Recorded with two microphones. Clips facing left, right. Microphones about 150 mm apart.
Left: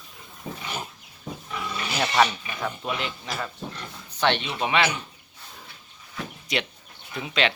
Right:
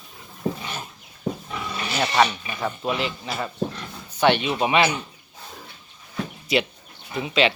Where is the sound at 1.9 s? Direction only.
5° right (ahead or behind).